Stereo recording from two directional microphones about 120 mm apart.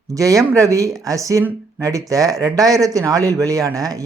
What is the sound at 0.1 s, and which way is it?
Speech, 30° right (ahead or behind).